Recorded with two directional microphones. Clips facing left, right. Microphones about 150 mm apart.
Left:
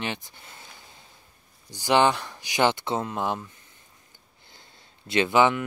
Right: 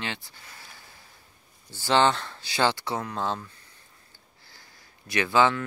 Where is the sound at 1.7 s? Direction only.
15° left (ahead or behind).